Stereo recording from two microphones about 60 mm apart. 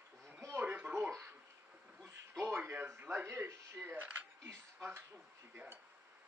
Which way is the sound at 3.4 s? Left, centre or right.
Right.